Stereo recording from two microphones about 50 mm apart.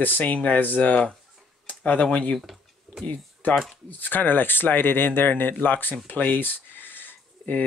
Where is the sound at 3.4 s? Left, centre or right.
Left.